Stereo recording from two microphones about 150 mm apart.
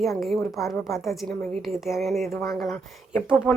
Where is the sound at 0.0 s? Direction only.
Centre (ahead or behind).